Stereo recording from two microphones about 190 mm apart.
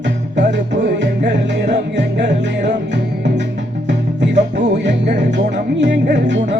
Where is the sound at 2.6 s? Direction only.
40° right (ahead or behind).